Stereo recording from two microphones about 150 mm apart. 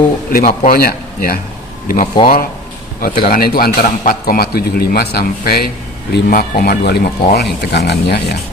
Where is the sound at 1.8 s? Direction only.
65° left (ahead or behind).